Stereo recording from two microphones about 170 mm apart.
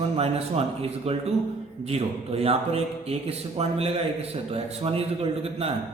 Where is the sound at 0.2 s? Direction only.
35° right (ahead or behind).